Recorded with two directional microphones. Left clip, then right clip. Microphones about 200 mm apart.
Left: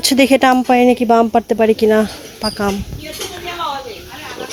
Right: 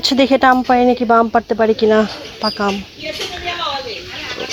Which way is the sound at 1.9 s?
10° left (ahead or behind).